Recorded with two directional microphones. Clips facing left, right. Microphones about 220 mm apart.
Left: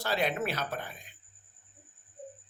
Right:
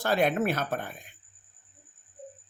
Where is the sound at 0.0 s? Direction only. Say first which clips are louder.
Right 5 dB; 50° right (ahead or behind).